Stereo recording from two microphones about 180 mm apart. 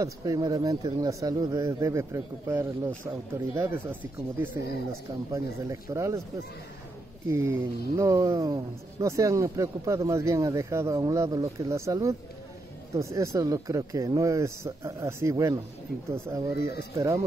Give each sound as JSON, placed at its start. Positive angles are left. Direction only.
{"t": 0.0, "sound": "speech", "side_deg": -20}
{"t": 7.2, "sound": "speech", "side_deg": -15}